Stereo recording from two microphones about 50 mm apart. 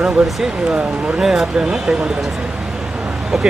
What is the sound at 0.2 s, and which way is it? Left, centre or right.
Speech, centre.